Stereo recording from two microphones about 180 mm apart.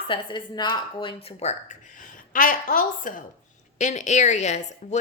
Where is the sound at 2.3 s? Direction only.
50° left (ahead or behind).